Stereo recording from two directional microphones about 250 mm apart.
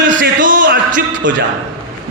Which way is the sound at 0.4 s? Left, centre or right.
Right.